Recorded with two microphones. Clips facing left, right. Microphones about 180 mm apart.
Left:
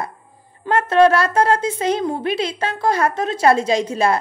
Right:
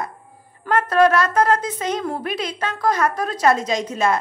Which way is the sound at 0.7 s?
30° left (ahead or behind).